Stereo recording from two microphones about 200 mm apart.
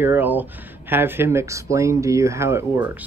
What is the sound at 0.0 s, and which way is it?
Speech, 10° right (ahead or behind).